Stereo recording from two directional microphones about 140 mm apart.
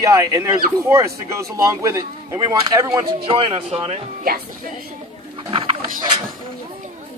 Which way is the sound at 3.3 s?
40° right (ahead or behind).